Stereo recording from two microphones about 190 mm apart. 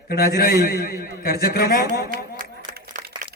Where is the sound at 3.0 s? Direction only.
45° right (ahead or behind).